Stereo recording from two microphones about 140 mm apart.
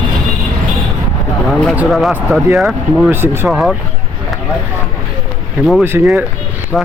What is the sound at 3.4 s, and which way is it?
Speech, centre (ahead or behind).